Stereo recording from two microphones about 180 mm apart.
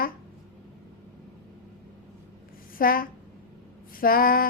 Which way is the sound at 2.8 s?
50° left (ahead or behind).